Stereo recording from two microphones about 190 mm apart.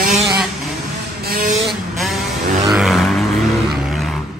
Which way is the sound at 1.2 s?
50° right (ahead or behind).